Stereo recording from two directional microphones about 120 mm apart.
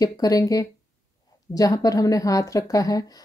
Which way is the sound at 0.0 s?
30° left (ahead or behind).